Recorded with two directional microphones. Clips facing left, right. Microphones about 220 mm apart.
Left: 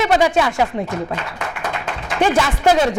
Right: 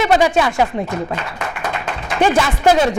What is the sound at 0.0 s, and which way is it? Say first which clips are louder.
A man's voice: right 1 dB; 15° right (ahead or behind).